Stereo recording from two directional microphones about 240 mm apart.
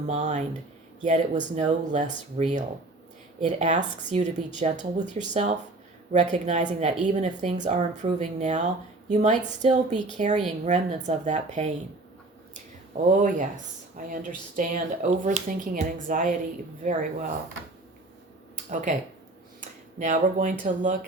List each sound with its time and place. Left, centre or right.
0.1 s a woman's voice: right
13.1 s a woman's voice: right
18.7 s a woman's voice: right
20.0 s a woman's voice: right